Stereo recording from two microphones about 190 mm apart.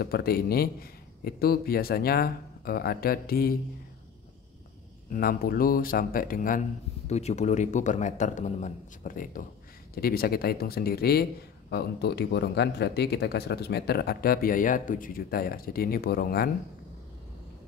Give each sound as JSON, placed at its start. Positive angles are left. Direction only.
{"t": 0.0, "sound": "a man's voice", "side_deg": 55}
{"t": 5.1, "sound": "a man's voice", "side_deg": 50}
{"t": 7.1, "sound": "a man's voice", "side_deg": 35}